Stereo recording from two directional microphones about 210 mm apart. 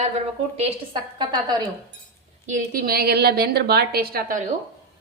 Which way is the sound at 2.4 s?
40° right (ahead or behind).